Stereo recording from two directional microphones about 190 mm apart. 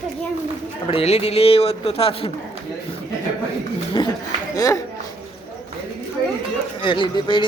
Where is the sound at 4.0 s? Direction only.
25° left (ahead or behind).